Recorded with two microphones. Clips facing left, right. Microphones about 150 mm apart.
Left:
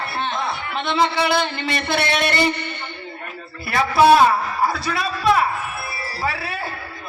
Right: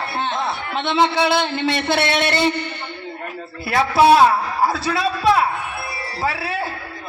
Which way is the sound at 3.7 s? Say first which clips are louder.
Even; 25° right (ahead or behind).